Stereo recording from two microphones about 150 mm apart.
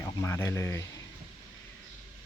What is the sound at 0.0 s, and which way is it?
Speech, 20° left (ahead or behind).